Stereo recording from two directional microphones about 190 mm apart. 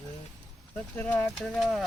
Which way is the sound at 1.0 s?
5° left (ahead or behind).